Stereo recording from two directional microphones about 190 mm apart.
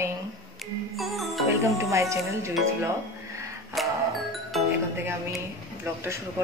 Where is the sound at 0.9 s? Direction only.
Centre (ahead or behind).